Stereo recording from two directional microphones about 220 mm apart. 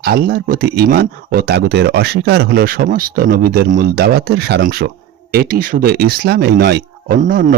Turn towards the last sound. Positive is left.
turn(degrees=-40)  # may be behind; listen again after turning